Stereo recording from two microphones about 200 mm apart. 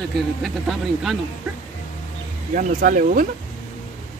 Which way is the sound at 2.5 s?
40° right (ahead or behind).